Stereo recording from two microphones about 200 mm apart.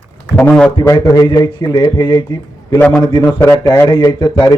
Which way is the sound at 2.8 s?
5° left (ahead or behind).